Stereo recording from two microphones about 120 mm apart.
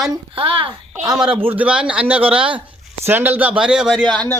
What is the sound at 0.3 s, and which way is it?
Speech, 50° right (ahead or behind).